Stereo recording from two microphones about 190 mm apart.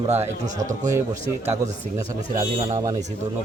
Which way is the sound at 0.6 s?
40° right (ahead or behind).